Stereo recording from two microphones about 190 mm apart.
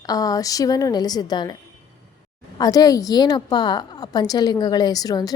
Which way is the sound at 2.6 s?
20° left (ahead or behind).